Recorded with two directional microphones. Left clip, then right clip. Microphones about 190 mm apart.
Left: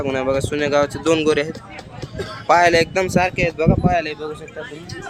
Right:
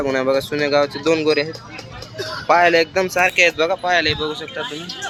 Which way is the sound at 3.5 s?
10° left (ahead or behind).